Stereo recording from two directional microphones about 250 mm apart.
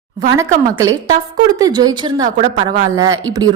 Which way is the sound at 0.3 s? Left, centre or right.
Centre.